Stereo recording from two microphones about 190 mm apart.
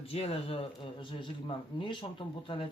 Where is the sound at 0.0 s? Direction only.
30° left (ahead or behind).